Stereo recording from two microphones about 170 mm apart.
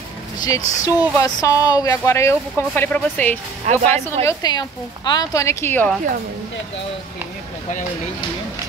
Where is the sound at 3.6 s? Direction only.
40° right (ahead or behind).